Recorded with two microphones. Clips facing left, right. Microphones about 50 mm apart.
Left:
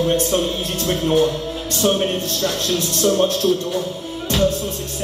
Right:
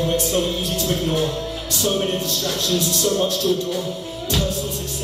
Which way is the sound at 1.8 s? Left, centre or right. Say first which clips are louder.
Left 3 dB; left.